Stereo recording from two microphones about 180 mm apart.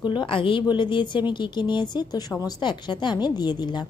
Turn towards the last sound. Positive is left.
turn(degrees=25)  # may be behind; listen again after turning